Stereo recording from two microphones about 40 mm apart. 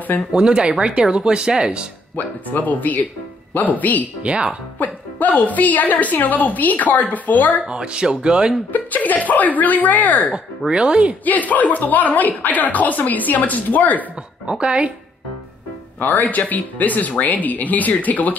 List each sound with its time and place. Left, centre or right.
0.3 s speech: right
2.1 s a woman's voice: left
4.2 s speech: right
4.7 s a woman's voice: left
7.6 s speech: right
8.7 s a woman's voice: left
10.7 s speech: right
11.2 s a woman's voice: left
14.5 s speech: right
16.0 s a woman's voice: left